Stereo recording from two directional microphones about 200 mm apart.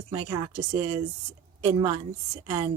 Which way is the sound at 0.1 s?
20° right (ahead or behind).